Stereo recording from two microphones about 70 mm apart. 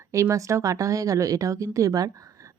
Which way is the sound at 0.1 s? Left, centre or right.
Right.